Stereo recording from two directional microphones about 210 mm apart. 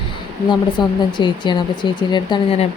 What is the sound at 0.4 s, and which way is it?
Speech, 20° left (ahead or behind).